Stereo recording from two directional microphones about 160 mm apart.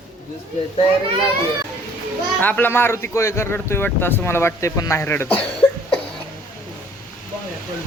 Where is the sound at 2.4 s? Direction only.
10° left (ahead or behind).